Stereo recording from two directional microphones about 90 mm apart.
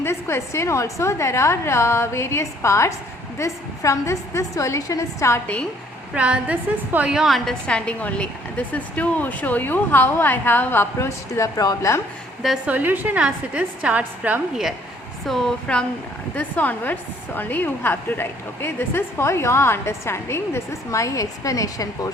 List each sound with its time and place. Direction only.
0.0 s a woman's voice: 30° left (ahead or behind)
6.1 s a woman's voice: 15° right (ahead or behind)
7.7 s a woman's voice: 10° left (ahead or behind); by 12.0 s 35° left (ahead or behind)
12.6 s a woman's voice: 20° right (ahead or behind)
15.3 s a woman's voice: 5° left (ahead or behind); by 22.1 s 40° left (ahead or behind)